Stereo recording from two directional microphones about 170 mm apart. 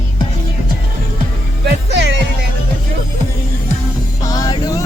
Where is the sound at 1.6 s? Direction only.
85° right.